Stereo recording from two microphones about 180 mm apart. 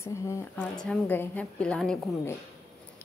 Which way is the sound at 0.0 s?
15° left (ahead or behind).